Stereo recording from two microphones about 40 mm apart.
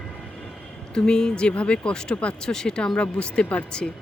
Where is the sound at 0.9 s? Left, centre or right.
Centre.